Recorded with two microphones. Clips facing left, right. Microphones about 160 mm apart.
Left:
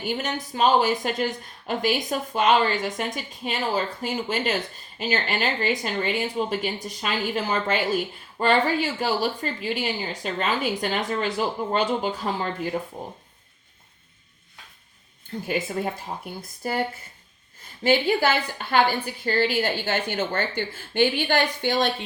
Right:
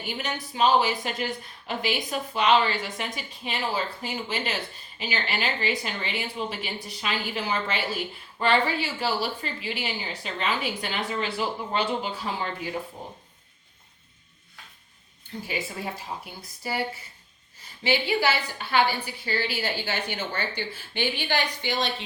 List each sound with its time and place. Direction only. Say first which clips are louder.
0.0 s a woman's voice: left 5 dB; 50° left (ahead or behind)
15.4 s a woman's voice: left 6 dB; 50° left (ahead or behind)